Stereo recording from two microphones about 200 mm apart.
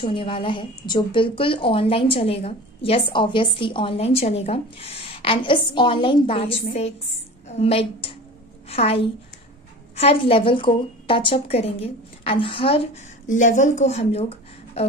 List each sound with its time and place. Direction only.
0.0 s a woman's voice: 25° left (ahead or behind)